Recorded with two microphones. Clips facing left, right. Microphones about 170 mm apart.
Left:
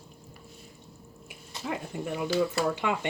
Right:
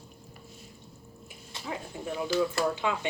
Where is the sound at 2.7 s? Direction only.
65° left (ahead or behind).